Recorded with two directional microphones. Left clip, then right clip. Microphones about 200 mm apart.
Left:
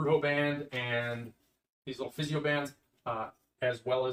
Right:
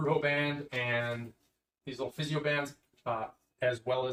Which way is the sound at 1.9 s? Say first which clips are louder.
Right 1 dB; 20° left (ahead or behind).